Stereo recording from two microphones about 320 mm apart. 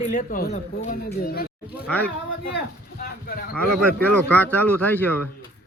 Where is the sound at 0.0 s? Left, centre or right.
Left.